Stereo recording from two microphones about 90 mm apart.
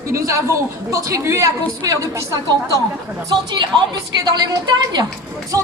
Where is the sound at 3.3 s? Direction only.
60° right (ahead or behind).